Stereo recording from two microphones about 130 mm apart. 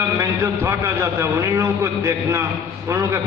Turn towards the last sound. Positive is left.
turn(degrees=-25)  # may be behind; listen again after turning